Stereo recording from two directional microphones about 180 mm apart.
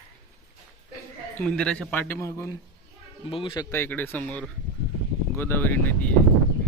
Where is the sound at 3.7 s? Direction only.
10° left (ahead or behind).